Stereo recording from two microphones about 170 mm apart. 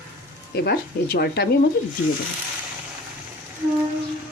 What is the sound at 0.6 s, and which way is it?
Speech, 65° left (ahead or behind).